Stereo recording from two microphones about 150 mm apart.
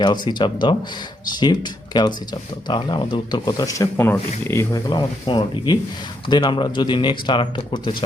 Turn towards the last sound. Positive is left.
turn(degrees=30)  # may be behind; listen again after turning